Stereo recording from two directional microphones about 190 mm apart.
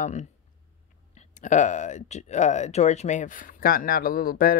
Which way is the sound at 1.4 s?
40° left (ahead or behind).